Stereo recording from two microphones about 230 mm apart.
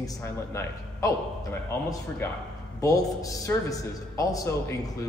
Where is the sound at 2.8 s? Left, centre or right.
Centre.